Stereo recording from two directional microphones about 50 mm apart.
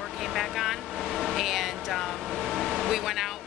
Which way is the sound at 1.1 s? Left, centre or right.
Centre.